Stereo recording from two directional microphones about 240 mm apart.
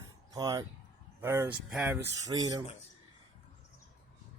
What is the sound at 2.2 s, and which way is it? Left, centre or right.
Speech, centre.